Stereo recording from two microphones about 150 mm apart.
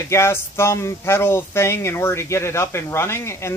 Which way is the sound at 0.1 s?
15° left (ahead or behind).